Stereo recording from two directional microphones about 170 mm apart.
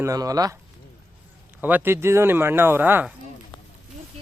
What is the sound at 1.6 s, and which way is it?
Speech, 10° right (ahead or behind).